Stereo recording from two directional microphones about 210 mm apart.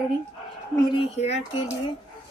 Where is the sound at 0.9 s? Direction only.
30° left (ahead or behind).